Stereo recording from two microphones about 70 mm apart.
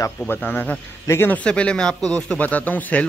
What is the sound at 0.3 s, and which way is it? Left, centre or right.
Speech, left.